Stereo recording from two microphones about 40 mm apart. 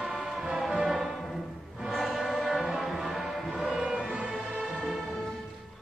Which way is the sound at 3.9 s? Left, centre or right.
Right.